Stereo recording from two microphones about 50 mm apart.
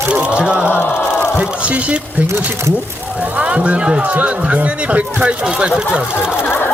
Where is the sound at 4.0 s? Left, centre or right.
Right.